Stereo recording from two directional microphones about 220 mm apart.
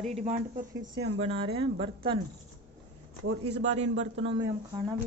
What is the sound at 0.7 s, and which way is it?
Speech, 60° right (ahead or behind).